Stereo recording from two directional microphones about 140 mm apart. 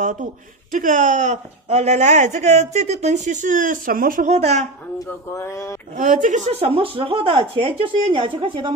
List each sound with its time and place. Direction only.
0.0 s speech: 70° right (ahead or behind)
4.3 s speech: 50° right (ahead or behind)
5.3 s speech: 20° left (ahead or behind)
5.9 s speech: 65° right (ahead or behind); by 8.7 s 35° right (ahead or behind)